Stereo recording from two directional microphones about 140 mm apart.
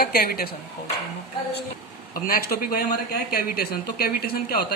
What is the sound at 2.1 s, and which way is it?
Speech, 90° left.